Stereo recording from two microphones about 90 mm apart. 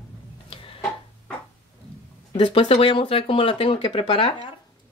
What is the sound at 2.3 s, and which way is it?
Speech, 75° left (ahead or behind).